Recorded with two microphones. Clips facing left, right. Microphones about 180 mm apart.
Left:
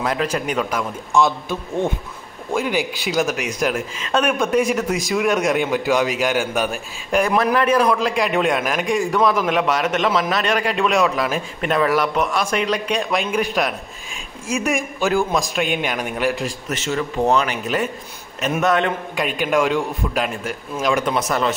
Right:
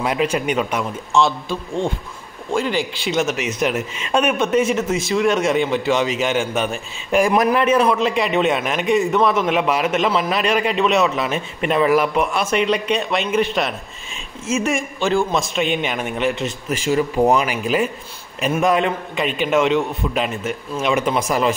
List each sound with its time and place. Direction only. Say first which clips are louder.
0.0 s speech: right 2 dB; 10° right (ahead or behind)
1.1 s a man's voice: even; 15° left (ahead or behind); by 16.4 s centre (ahead or behind)
16.6 s a man's voice: right 7 dB; 10° right (ahead or behind)